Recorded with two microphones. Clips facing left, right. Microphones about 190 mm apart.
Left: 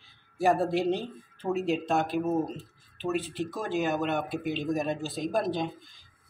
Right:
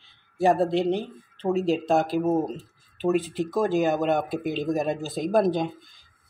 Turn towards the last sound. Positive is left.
turn(degrees=-50)  # may be behind; listen again after turning